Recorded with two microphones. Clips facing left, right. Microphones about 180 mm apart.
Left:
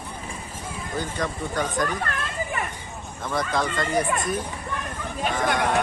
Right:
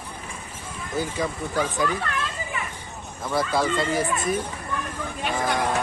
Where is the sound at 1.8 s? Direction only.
50° left (ahead or behind).